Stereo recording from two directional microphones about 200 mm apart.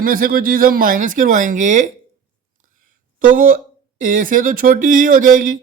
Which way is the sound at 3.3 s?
45° right (ahead or behind).